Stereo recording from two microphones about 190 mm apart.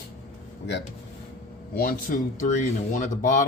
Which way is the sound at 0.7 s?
70° left (ahead or behind).